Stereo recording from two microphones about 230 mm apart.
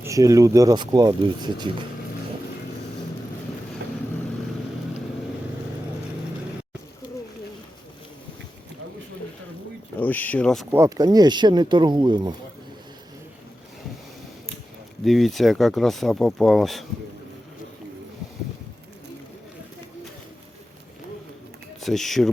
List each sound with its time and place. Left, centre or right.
0.0 s speech: centre
10.0 s speech: centre
10.7 s speech: centre
15.0 s speech: centre
21.8 s speech: centre